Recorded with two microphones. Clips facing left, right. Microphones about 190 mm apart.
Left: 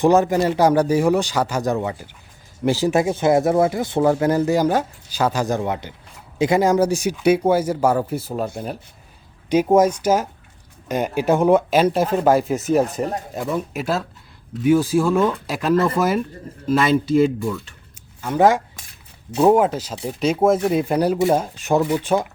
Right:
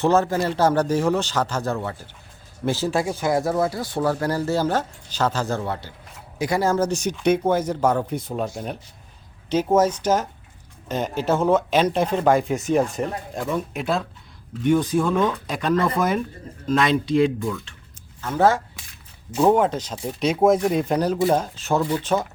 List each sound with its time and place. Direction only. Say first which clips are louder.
0.0 s speech: left 4 dB; 15° left (ahead or behind)